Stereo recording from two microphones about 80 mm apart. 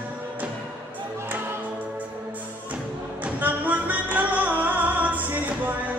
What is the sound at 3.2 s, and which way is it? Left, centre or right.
Music, right.